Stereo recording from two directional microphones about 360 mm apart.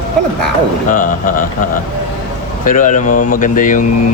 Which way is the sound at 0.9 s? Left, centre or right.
Left.